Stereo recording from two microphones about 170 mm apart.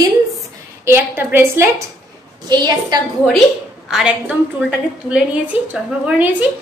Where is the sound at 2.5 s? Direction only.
25° right (ahead or behind).